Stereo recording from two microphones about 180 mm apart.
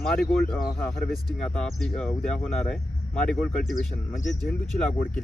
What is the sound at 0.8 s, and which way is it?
Speech, 5° left (ahead or behind).